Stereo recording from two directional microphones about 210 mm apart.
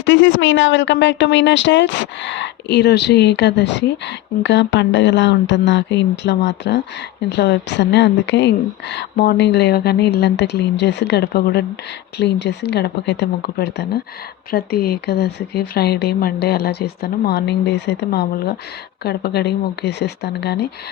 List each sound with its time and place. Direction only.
0.0 s speech: 60° left (ahead or behind)